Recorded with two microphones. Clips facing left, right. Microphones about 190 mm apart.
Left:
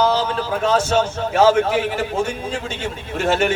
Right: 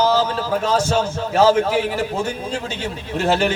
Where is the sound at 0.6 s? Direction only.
40° right (ahead or behind).